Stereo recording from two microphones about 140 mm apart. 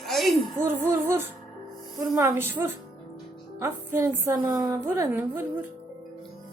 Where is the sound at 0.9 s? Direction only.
20° right (ahead or behind).